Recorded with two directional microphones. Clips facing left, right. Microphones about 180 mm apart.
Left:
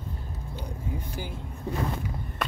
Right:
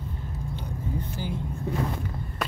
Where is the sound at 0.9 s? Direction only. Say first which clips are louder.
Right 4 dB; 10° left (ahead or behind).